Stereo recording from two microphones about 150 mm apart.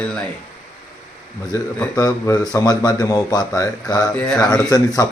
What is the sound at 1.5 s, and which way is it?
Speech, 20° left (ahead or behind).